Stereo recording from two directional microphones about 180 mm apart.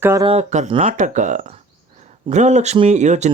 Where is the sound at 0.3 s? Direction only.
40° right (ahead or behind).